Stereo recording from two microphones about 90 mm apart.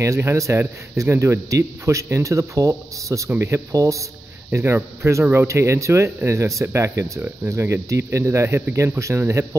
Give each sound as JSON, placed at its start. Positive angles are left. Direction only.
{"t": 0.0, "sound": "speech", "side_deg": -30}
{"t": 4.5, "sound": "speech", "side_deg": -25}